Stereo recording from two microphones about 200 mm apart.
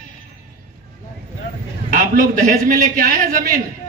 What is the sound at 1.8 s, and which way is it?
A man's voice, 45° right (ahead or behind).